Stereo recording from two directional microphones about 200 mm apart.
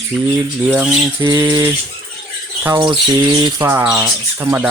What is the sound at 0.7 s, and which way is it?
Speech, 10° right (ahead or behind).